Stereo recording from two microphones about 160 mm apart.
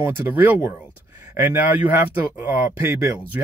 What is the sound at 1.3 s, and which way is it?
Speech, 10° right (ahead or behind).